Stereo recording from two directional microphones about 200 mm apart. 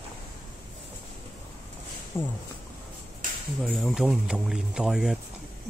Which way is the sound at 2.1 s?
10° left (ahead or behind).